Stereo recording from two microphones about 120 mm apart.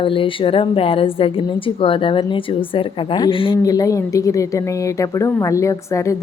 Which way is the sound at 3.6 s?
30° left (ahead or behind).